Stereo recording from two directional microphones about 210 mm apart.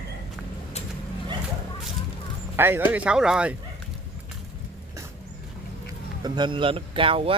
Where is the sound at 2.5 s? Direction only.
10° right (ahead or behind).